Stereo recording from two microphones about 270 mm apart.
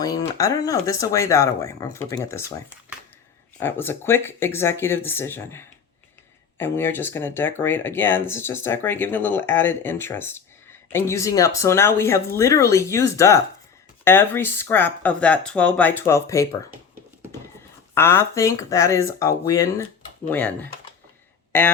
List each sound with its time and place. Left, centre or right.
0.0 s speech: centre
3.6 s speech: centre
16.7 s a sound: centre
17.9 s speech: centre